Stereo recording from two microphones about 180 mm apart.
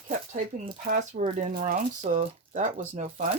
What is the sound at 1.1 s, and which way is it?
Speech, 45° right (ahead or behind).